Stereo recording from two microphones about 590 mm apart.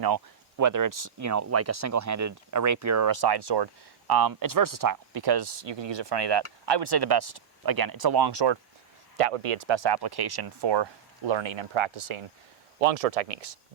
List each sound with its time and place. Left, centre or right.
0.0 s speech: right
9.1 s speech: right
12.8 s speech: right